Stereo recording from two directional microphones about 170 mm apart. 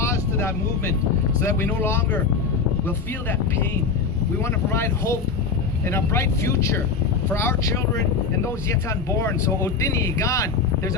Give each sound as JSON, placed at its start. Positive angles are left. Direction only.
{"t": 0.0, "sound": "vehicle", "side_deg": 15}
{"t": 1.4, "sound": "speech", "side_deg": 15}
{"t": 4.7, "sound": "speech", "side_deg": 15}
{"t": 9.1, "sound": "speech", "side_deg": 20}